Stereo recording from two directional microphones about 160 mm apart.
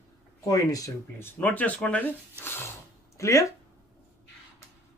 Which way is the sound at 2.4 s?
15° left (ahead or behind).